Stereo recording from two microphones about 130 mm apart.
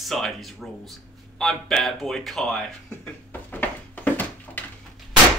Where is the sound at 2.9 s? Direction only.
15° left (ahead or behind).